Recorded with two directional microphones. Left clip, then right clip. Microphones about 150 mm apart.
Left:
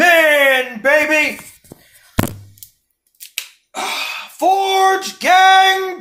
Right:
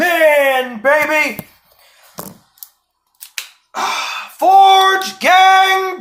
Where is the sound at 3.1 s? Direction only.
35° left (ahead or behind).